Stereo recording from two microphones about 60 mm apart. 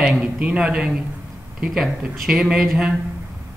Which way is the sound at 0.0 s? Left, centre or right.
Centre.